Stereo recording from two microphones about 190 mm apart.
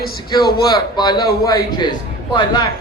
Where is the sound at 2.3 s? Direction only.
20° left (ahead or behind).